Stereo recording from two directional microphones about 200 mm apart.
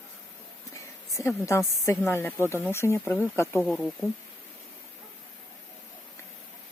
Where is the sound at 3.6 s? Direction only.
Centre (ahead or behind).